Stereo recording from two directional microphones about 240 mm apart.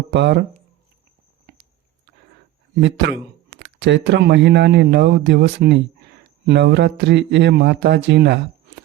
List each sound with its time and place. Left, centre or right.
0.1 s speech: right
2.8 s speech: right